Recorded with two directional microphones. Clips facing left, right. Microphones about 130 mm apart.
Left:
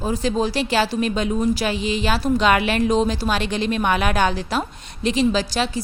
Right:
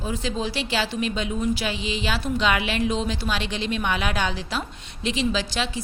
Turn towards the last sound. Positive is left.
turn(degrees=40)  # may be behind; listen again after turning